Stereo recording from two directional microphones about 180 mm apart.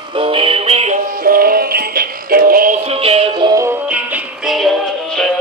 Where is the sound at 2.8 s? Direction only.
35° right (ahead or behind).